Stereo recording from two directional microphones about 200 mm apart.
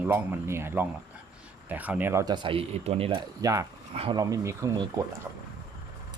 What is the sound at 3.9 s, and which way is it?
Speech, 30° right (ahead or behind).